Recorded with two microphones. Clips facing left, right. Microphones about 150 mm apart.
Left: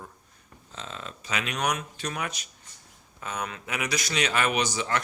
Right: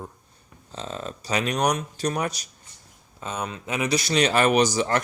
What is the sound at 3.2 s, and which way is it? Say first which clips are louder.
Speech: right 3 dB; 25° right (ahead or behind).